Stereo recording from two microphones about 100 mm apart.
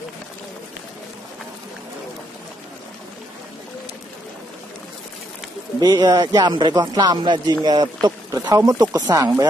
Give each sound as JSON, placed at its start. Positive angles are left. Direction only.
{"t": 5.8, "sound": "speech", "side_deg": -45}